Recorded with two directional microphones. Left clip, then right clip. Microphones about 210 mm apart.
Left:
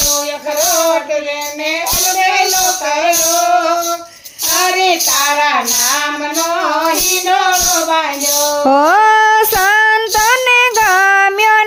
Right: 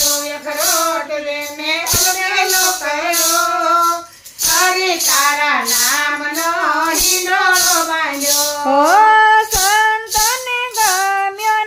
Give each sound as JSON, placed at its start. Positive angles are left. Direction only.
{"t": 8.7, "sound": "child singing", "side_deg": 50}